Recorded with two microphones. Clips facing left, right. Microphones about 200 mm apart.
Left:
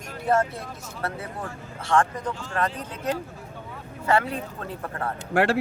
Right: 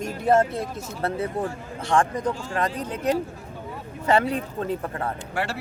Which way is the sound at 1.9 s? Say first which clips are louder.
Right 1 dB; 15° right (ahead or behind).